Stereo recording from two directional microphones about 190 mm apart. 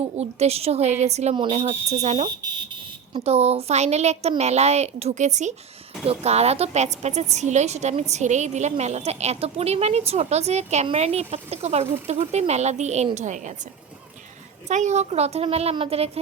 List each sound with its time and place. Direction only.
0.2 s speech: 35° right (ahead or behind)
14.7 s speech: 40° right (ahead or behind)